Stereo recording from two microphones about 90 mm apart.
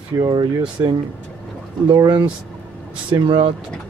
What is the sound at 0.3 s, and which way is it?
Speech, 60° right (ahead or behind).